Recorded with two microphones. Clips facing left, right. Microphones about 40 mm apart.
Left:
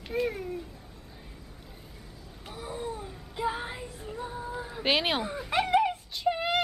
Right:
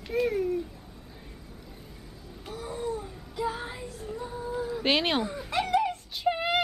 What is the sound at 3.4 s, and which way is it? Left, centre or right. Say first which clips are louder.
Female singing: even; centre.